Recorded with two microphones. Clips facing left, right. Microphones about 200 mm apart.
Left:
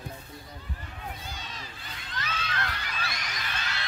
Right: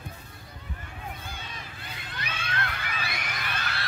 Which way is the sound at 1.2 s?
55° right (ahead or behind).